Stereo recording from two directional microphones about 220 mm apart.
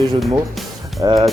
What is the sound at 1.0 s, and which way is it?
Speech, 20° right (ahead or behind).